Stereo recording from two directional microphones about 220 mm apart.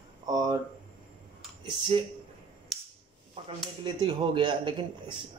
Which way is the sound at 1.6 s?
25° right (ahead or behind).